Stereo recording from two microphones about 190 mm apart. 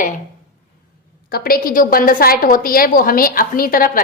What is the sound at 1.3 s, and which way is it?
A woman's voice, 55° left (ahead or behind).